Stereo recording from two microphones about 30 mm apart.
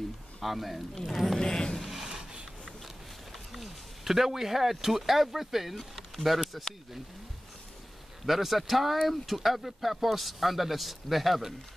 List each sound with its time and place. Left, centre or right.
0.4 s speech: centre
1.0 s speech: centre
1.4 s a sound: left
2.0 s a sound: centre
3.5 s speech: centre
6.1 s speech: centre
8.3 s speech: centre